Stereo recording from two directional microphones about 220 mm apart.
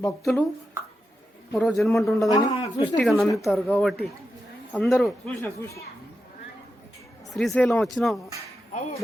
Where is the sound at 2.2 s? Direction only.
15° left (ahead or behind).